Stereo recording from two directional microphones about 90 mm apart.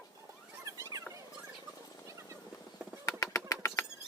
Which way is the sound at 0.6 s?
35° right (ahead or behind).